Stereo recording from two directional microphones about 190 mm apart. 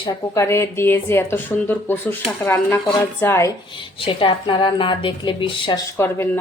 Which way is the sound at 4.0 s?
25° left (ahead or behind).